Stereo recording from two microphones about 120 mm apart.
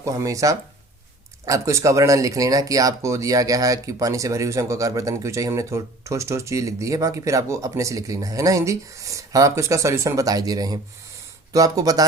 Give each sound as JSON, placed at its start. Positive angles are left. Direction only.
{"t": 0.0, "sound": "speech", "side_deg": -25}